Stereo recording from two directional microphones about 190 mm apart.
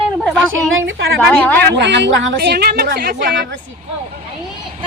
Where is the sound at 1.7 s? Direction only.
65° right (ahead or behind).